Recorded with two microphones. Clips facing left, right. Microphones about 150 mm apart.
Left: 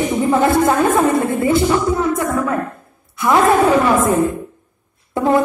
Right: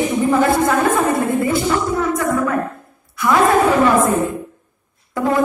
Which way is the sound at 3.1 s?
20° left (ahead or behind).